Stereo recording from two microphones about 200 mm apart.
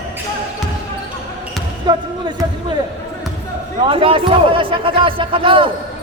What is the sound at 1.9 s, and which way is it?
Speech, 20° right (ahead or behind).